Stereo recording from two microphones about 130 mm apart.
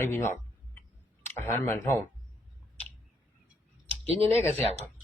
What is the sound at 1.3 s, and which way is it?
Speech, 15° left (ahead or behind).